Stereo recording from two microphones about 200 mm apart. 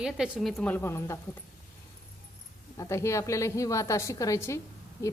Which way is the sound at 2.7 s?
15° left (ahead or behind).